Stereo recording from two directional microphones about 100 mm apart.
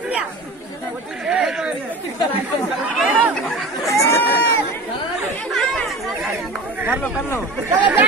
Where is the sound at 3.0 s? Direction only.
Centre (ahead or behind).